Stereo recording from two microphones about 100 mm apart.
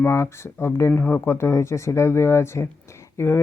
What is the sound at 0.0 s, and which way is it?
Speech, 25° left (ahead or behind).